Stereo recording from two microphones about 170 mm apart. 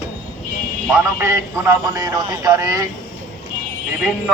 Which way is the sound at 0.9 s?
15° right (ahead or behind).